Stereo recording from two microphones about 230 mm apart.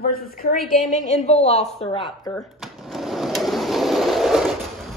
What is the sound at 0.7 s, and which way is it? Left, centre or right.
A woman's voice, left.